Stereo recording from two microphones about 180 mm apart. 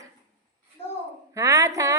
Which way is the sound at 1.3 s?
15° right (ahead or behind).